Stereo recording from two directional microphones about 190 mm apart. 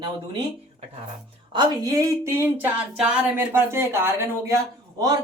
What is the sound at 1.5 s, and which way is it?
A man's voice, 20° right (ahead or behind).